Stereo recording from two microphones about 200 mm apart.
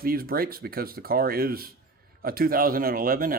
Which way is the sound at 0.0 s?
45° right (ahead or behind).